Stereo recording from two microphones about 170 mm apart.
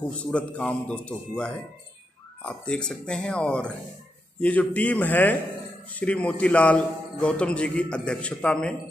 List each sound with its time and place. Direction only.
0.3 s a man's voice: 5° left (ahead or behind)